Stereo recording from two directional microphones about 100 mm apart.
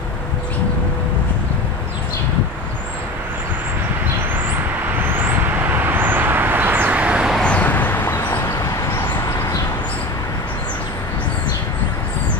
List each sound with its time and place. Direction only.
5.1 s vehicle: 20° right (ahead or behind)
7.3 s vehicle: 10° left (ahead or behind)
9.0 s vehicle: 40° left (ahead or behind)